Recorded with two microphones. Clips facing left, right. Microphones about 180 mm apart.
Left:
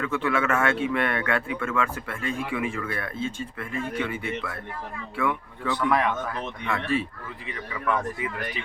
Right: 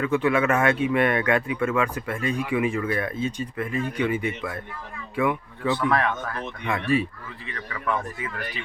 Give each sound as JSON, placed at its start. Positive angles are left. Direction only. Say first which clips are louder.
{"t": 0.0, "sound": "a man's voice", "louder": "right 4 dB", "side_deg": -15}
{"t": 5.9, "sound": "speech", "louder": "even", "side_deg": 15}
{"t": 6.7, "sound": "a man's voice", "louder": "right 3 dB", "side_deg": -15}